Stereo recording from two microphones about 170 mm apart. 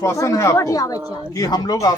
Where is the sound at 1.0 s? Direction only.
10° right (ahead or behind).